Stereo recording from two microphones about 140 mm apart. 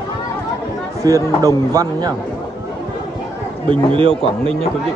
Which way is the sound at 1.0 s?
25° right (ahead or behind).